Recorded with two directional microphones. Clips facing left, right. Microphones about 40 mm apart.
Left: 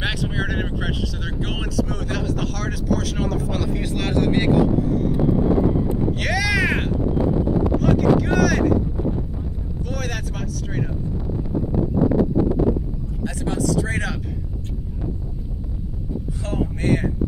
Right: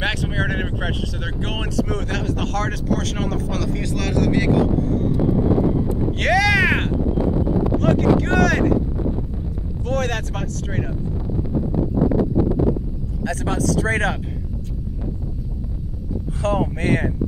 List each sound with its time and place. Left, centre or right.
0.0 s vehicle: centre
1.9 s speech: centre
6.2 s a sound: centre
7.8 s speech: centre
9.8 s speech: centre
13.3 s speech: right
16.4 s speech: right